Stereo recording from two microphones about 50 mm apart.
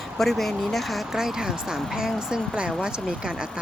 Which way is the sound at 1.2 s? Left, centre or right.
Centre.